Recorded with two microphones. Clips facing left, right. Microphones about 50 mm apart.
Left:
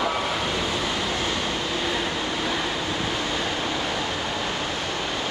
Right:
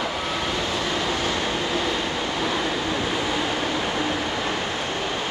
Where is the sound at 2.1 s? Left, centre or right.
Centre.